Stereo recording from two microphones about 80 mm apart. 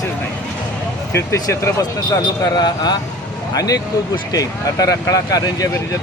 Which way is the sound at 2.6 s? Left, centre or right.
Left.